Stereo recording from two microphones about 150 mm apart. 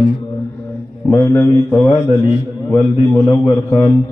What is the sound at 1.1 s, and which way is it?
Mantra, 15° left (ahead or behind).